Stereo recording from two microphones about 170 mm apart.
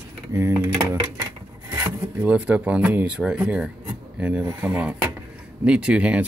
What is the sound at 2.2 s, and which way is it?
Speech, 10° right (ahead or behind).